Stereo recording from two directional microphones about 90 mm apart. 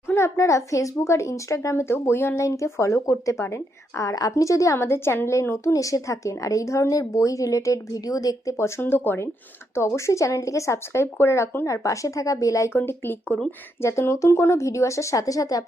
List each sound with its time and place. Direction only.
0.1 s a woman's voice: 30° left (ahead or behind)